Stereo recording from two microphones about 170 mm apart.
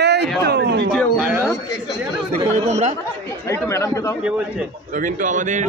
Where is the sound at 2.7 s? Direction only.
45° right (ahead or behind).